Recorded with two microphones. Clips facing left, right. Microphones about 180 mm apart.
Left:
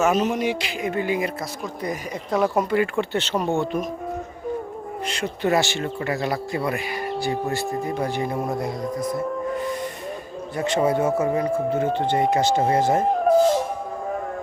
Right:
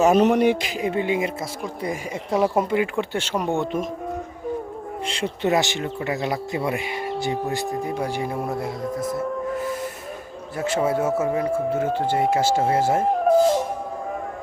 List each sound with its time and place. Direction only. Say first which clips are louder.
0.2 s speech: right 5 dB; 65° right (ahead or behind)
0.7 s speech: right 1 dB; 30° right (ahead or behind)
3.0 s speech: left 1 dB; 10° right (ahead or behind)
5.0 s speech: even; 30° right (ahead or behind); by 13.3 s 5° right (ahead or behind)